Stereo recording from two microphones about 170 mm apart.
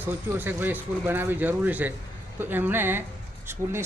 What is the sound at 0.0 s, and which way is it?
Speech, 10° right (ahead or behind).